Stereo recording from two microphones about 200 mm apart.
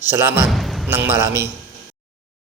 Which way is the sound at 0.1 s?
10° right (ahead or behind).